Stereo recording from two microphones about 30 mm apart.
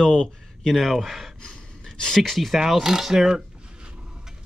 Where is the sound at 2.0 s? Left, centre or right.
Centre.